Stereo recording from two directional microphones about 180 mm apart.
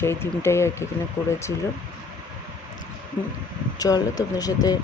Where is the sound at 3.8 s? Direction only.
20° left (ahead or behind).